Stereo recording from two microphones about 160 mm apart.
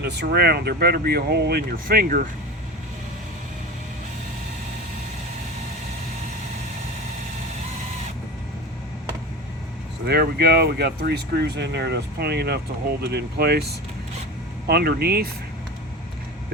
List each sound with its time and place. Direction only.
0.0 s speech: 90° right; by 2.2 s 65° right (ahead or behind)
10.1 s speech: 80° right